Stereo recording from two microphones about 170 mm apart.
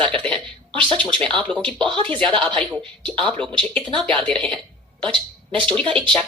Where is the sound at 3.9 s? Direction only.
30° right (ahead or behind).